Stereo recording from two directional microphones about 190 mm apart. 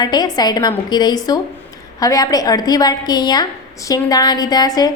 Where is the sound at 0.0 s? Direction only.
20° left (ahead or behind).